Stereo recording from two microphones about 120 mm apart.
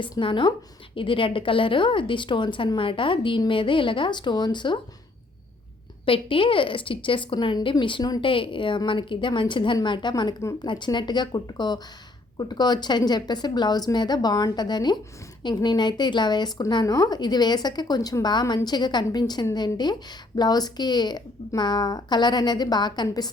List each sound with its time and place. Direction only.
0.0 s a woman's voice: 45° left (ahead or behind)
6.1 s a woman's voice: 45° left (ahead or behind)